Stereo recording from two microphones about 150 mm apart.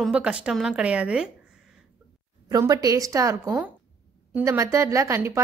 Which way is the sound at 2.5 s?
25° right (ahead or behind).